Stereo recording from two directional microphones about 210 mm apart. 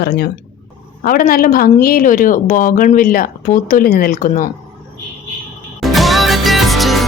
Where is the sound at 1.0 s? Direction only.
45° left (ahead or behind).